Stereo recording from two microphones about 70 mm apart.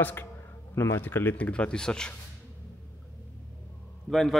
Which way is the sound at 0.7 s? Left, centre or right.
Left.